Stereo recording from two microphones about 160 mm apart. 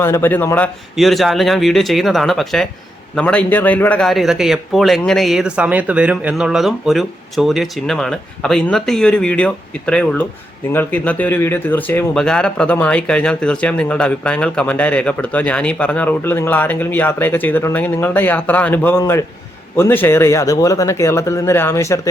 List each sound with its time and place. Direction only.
0.0 s a man's voice: 15° left (ahead or behind)